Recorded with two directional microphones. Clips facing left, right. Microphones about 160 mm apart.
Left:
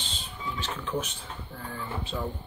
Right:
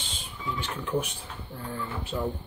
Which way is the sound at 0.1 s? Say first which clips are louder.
Right 3 dB; 10° right (ahead or behind).